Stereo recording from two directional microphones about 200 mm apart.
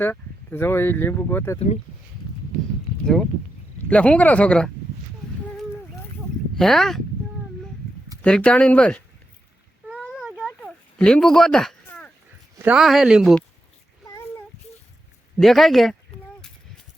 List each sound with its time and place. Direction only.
0.0 s speech: 10° left (ahead or behind)
1.5 s speech: 35° left (ahead or behind)
3.8 s speech: 5° left (ahead or behind)
6.6 s speech: centre (ahead or behind)
8.2 s speech: 5° left (ahead or behind)
10.2 s a sound: 5° right (ahead or behind)
10.4 s a sound: 5° left (ahead or behind)
12.6 s speech: 5° right (ahead or behind)
14.1 s child singing: 15° left (ahead or behind)
15.4 s speech: centre (ahead or behind)